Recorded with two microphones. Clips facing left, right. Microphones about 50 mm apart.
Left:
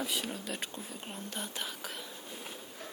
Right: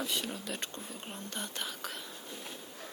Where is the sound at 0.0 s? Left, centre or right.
Centre.